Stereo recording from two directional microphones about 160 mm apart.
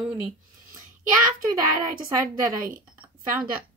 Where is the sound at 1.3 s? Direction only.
60° right (ahead or behind).